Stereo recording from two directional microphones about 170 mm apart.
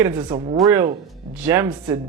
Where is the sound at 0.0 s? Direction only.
15° right (ahead or behind).